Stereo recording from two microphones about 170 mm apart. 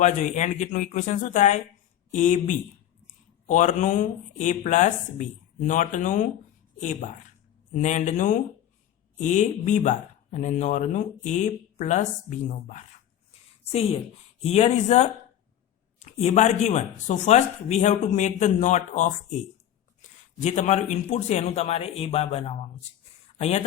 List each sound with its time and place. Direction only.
0.0 s speech: 45° left (ahead or behind)
14.4 s a man's voice: 40° left (ahead or behind)
20.4 s a man's voice: 40° left (ahead or behind)